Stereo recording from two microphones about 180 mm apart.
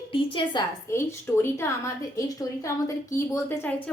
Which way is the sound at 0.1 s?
30° left (ahead or behind).